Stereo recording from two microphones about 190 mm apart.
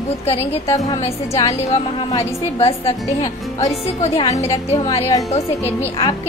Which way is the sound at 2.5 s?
30° left (ahead or behind).